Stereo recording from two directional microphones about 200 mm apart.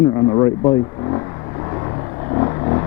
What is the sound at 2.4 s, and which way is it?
Vehicle, 25° left (ahead or behind).